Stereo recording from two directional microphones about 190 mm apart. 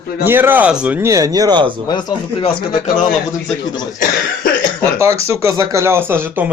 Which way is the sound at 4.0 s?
45° left (ahead or behind).